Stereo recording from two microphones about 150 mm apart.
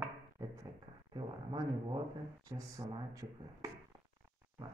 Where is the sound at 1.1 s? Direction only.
30° right (ahead or behind).